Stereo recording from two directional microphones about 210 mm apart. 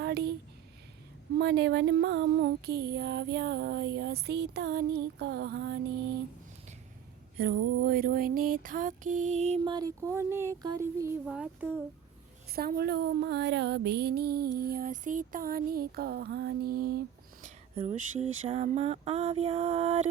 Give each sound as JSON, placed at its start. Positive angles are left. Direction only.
{"t": 0.0, "sound": "a sound", "side_deg": -50}
{"t": 1.4, "sound": "music", "side_deg": -55}
{"t": 7.3, "sound": "music", "side_deg": -50}
{"t": 9.6, "sound": "speech", "side_deg": -15}
{"t": 12.5, "sound": "music", "side_deg": -45}
{"t": 17.4, "sound": "a sound", "side_deg": -35}